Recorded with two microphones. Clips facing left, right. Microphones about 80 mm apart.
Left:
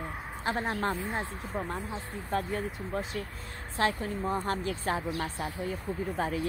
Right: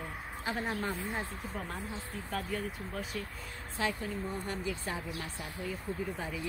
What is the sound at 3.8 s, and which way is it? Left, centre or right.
Speech, left.